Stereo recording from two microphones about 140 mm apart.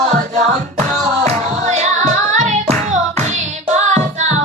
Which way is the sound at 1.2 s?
55° right (ahead or behind).